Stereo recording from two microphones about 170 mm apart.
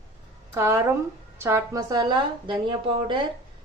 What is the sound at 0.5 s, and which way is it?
A woman's voice, 15° right (ahead or behind).